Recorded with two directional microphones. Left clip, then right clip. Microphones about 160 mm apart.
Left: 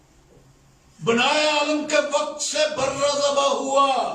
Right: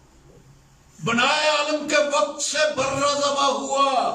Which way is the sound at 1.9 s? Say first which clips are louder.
Right 4 dB; 25° left (ahead or behind).